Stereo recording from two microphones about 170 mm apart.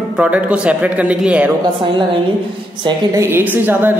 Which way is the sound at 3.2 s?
10° right (ahead or behind).